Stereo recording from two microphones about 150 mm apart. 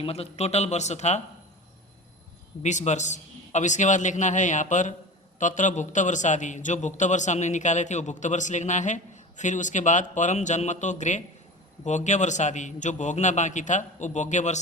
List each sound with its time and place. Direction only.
0.0 s a man's voice: 40° left (ahead or behind)
2.6 s a man's voice: 50° left (ahead or behind)